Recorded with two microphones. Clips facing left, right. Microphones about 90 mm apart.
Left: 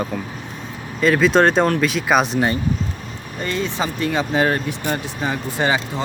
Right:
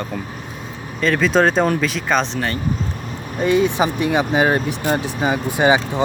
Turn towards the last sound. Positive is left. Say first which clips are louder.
# right 4 dB
turn(degrees=-15)  # may be behind; listen again after turning